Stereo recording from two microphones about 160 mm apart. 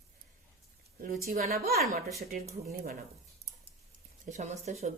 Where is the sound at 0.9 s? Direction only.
60° right (ahead or behind).